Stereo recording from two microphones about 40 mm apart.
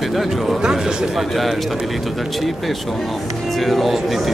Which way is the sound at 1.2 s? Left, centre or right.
Centre.